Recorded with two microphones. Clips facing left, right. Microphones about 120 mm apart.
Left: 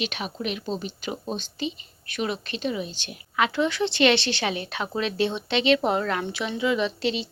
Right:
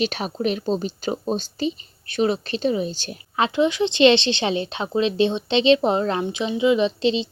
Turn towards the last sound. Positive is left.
turn(degrees=-20)  # may be behind; listen again after turning